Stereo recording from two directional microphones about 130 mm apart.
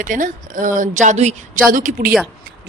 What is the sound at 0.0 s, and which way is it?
A woman's voice, 90° right.